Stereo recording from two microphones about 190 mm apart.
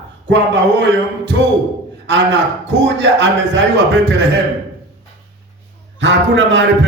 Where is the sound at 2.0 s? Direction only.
70° right (ahead or behind).